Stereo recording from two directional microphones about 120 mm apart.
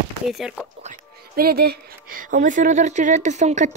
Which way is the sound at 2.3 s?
90° right.